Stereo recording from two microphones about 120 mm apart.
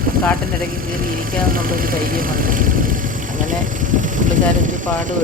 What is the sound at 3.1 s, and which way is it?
Vehicle, 90° right.